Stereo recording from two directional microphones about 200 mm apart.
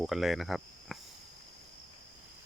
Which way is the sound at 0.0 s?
Centre (ahead or behind).